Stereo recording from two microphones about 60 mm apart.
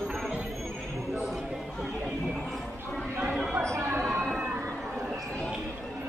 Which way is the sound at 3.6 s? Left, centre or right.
Right.